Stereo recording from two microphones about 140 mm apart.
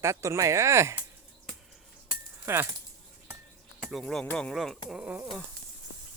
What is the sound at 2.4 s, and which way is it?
Speech, 20° right (ahead or behind).